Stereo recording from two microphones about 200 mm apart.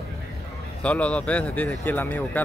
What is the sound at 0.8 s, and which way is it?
Speech, 5° left (ahead or behind).